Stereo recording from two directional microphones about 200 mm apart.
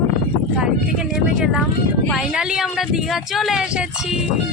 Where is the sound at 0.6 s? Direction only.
5° right (ahead or behind).